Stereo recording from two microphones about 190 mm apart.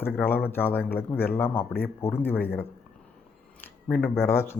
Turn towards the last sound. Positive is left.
turn(degrees=10)  # may be behind; listen again after turning